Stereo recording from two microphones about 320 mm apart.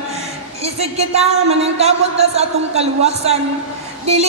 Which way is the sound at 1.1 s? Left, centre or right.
Centre.